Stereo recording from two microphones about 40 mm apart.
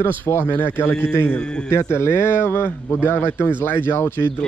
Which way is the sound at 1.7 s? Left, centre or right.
Left.